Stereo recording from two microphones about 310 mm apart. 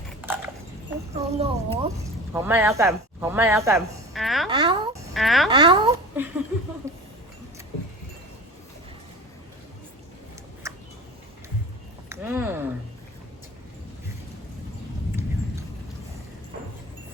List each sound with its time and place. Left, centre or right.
1.1 s speech: centre
2.3 s speech: centre
4.4 s babbling: centre
5.1 s speech: centre
5.5 s speech: centre
10.6 s a sound: centre
12.0 s speech: centre